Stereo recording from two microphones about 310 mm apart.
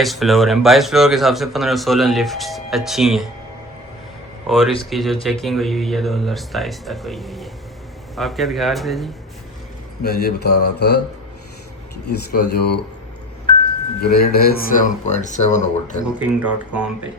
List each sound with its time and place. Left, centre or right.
0.0 s a man's voice: centre
4.4 s a man's voice: centre
10.0 s mantra: left
12.0 s mantra: left
14.0 s speech: left
16.1 s a man's voice: centre